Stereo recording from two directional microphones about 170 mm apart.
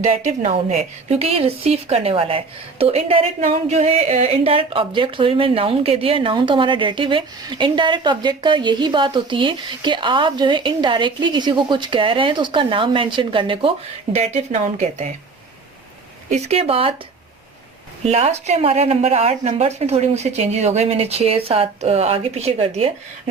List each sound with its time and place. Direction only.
0.0 s a woman's voice: 45° right (ahead or behind)
16.3 s a woman's voice: 35° right (ahead or behind)
18.0 s a woman's voice: 40° right (ahead or behind)